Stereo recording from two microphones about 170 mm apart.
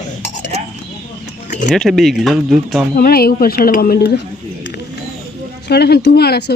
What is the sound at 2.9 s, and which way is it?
A woman's voice, 60° left (ahead or behind).